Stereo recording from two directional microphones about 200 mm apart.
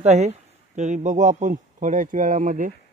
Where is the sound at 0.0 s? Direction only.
35° right (ahead or behind).